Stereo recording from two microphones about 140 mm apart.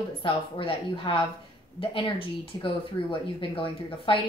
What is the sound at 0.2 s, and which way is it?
Speech, 40° left (ahead or behind).